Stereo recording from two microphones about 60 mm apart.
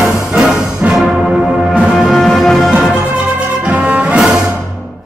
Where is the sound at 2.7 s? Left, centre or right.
Centre.